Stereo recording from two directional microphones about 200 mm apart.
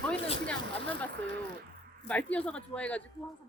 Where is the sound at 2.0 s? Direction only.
5° left (ahead or behind).